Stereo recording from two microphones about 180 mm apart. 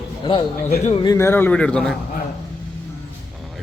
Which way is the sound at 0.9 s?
30° left (ahead or behind).